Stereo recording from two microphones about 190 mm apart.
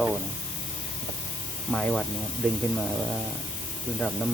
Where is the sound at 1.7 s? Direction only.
5° left (ahead or behind).